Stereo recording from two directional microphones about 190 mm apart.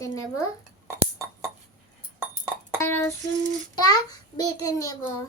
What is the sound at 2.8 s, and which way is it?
A child's voice, 15° left (ahead or behind).